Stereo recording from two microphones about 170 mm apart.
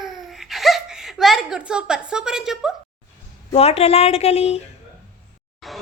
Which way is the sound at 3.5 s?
35° left (ahead or behind).